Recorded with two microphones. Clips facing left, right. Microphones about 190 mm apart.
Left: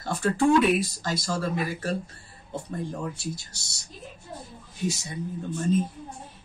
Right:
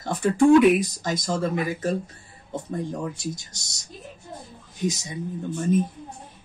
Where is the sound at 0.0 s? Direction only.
20° right (ahead or behind).